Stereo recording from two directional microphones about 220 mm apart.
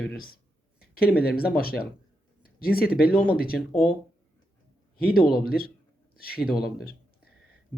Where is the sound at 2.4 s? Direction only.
45° left (ahead or behind).